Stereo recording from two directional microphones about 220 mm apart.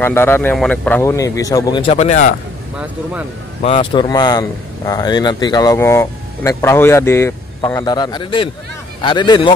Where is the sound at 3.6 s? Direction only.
25° left (ahead or behind).